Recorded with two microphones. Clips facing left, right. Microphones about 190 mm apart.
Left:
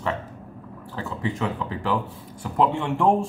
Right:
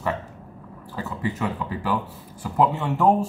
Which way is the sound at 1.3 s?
10° right (ahead or behind).